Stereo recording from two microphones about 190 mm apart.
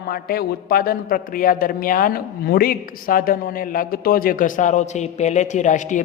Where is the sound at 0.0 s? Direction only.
50° left (ahead or behind).